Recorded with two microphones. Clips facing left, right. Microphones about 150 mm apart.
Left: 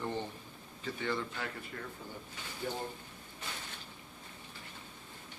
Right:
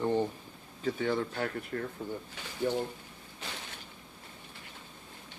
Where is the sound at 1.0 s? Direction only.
50° right (ahead or behind).